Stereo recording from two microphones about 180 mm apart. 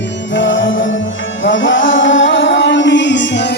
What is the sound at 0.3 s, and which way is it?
Music, 90° left.